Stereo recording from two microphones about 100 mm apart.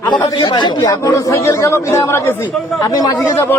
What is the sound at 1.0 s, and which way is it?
Speech, 30° left (ahead or behind).